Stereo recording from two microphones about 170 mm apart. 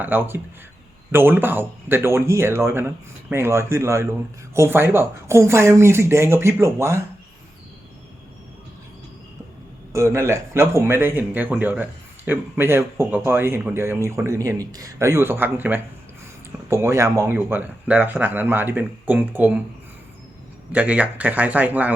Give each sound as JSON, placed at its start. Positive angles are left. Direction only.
{"t": 0.0, "sound": "speech", "side_deg": -10}
{"t": 9.9, "sound": "speech", "side_deg": -15}
{"t": 20.7, "sound": "speech", "side_deg": -10}